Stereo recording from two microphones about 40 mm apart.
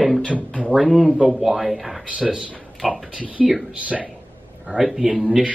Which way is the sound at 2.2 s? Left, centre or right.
Right.